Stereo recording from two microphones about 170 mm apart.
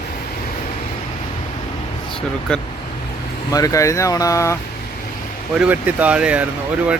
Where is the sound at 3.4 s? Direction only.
20° left (ahead or behind).